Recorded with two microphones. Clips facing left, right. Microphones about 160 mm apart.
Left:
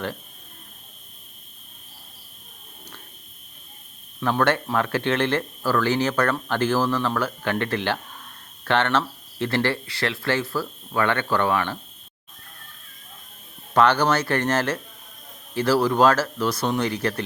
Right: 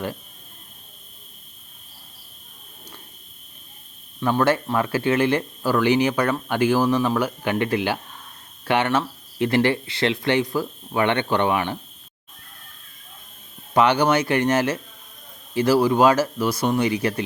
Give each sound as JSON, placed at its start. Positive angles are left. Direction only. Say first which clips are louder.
{"t": 4.2, "sound": "speech", "louder": "right 2 dB", "side_deg": -5}
{"t": 13.7, "sound": "speech", "louder": "right 1 dB", "side_deg": -10}